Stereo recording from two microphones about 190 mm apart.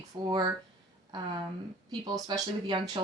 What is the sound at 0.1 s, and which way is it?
Speech, 20° right (ahead or behind).